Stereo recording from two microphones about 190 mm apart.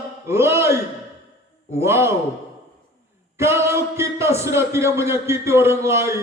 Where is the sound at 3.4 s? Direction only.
15° right (ahead or behind).